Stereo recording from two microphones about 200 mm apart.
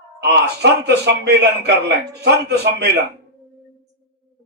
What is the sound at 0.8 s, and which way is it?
Speech, 55° right (ahead or behind).